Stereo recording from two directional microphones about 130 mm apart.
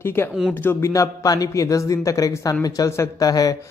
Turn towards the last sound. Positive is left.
turn(degrees=30)  # may be behind; listen again after turning